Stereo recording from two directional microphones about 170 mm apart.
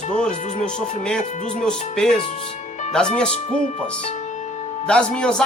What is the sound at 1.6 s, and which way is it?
A woman's voice, 5° left (ahead or behind).